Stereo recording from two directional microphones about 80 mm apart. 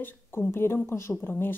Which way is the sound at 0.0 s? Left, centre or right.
Left.